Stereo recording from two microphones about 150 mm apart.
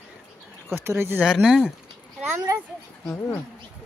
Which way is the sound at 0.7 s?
15° right (ahead or behind).